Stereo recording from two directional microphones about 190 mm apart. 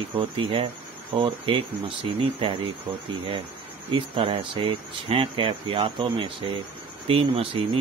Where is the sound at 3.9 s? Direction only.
25° right (ahead or behind).